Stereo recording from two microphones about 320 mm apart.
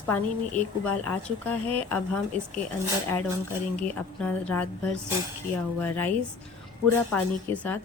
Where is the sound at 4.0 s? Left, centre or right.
Centre.